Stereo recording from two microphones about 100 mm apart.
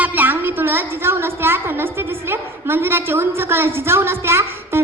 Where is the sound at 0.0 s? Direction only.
20° right (ahead or behind).